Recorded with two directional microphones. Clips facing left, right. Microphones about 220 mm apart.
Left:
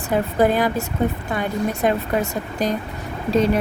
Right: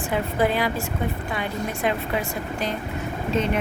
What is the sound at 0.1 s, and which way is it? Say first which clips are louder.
Speech: left 5 dB; 45° left (ahead or behind).